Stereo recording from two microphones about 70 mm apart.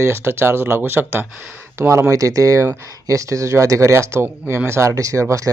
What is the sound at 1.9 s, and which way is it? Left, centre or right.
Speech, right.